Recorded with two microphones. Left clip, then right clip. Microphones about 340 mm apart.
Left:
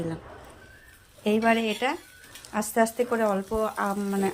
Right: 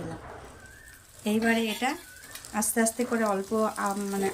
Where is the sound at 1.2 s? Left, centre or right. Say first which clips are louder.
Left 4 dB; centre.